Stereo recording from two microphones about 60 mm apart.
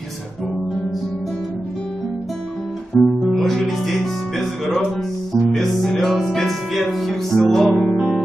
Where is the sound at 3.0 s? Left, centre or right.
Centre.